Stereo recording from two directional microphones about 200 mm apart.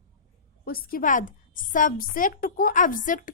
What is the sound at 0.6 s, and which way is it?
A woman's voice, 45° left (ahead or behind).